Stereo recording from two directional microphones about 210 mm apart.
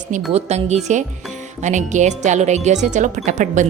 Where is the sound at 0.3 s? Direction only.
30° right (ahead or behind).